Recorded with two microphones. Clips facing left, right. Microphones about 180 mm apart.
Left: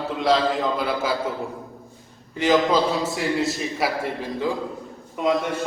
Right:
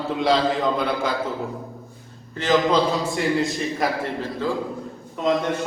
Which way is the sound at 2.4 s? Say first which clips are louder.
Even; 10° left (ahead or behind).